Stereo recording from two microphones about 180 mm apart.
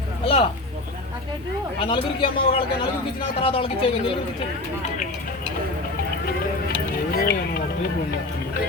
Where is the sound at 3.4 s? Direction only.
30° left (ahead or behind).